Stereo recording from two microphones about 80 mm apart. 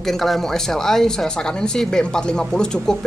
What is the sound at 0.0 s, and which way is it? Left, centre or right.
Speech, centre.